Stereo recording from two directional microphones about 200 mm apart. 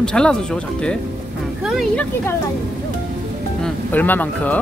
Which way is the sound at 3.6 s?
10° left (ahead or behind).